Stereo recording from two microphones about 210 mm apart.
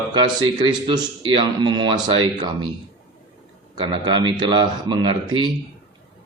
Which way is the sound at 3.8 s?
20° right (ahead or behind).